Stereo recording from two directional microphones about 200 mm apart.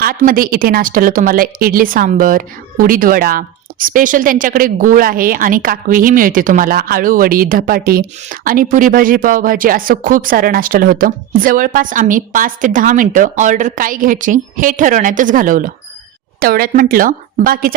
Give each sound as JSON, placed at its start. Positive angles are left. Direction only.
{"t": 0.0, "sound": "a woman's voice", "side_deg": -45}